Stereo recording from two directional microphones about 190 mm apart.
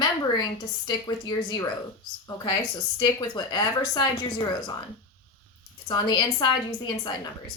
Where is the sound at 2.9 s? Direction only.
25° left (ahead or behind).